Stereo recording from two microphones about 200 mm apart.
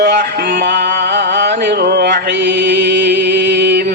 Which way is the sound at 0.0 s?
55° right (ahead or behind).